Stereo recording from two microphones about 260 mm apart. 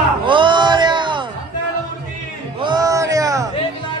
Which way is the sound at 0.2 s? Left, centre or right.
Centre.